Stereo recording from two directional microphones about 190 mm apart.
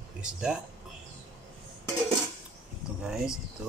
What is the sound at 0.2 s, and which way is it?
Speech, 5° right (ahead or behind).